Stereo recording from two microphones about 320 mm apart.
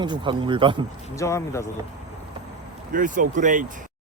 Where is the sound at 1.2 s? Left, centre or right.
Centre.